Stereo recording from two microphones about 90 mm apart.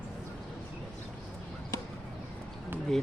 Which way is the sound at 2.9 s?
5° left (ahead or behind).